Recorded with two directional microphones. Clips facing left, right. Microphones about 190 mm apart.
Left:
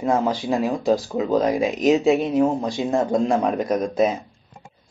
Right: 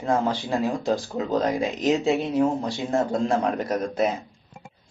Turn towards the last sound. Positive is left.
turn(degrees=15)  # may be behind; listen again after turning